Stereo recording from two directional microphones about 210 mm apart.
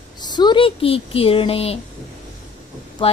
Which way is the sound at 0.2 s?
20° left (ahead or behind).